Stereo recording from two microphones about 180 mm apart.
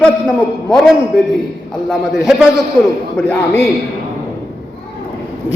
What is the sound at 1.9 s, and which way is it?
Speech, centre (ahead or behind).